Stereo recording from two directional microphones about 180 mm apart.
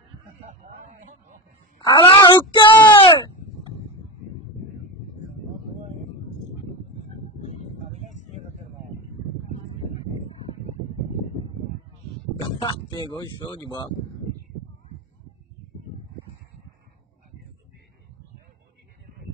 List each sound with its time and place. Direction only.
1.9 s speech: 25° left (ahead or behind)
7.9 s a sound: 40° right (ahead or behind)
12.4 s speech: 25° left (ahead or behind)